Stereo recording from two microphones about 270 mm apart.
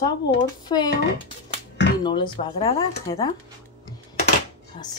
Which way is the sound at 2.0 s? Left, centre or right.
Centre.